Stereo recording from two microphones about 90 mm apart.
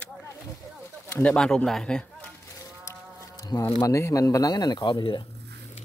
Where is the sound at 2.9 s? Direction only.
40° left (ahead or behind).